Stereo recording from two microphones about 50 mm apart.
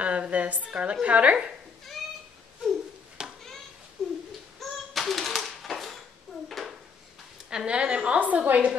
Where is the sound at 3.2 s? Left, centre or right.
Centre.